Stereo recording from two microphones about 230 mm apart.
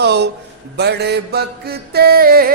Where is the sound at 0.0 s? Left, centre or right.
Right.